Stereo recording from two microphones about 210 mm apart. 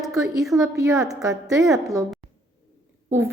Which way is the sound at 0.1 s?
15° right (ahead or behind).